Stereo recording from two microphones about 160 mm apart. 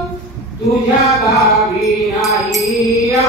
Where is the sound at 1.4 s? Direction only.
Centre (ahead or behind).